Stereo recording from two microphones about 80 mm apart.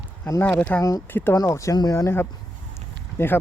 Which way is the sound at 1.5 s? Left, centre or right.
Left.